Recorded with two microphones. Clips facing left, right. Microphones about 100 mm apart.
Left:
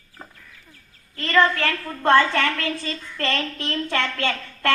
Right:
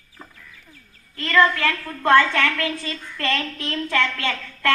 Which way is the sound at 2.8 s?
35° left (ahead or behind).